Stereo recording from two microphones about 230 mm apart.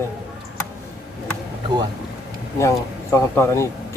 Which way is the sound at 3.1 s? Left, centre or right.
Centre.